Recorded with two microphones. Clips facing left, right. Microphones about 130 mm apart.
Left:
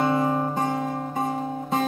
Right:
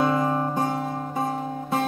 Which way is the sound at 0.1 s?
15° left (ahead or behind).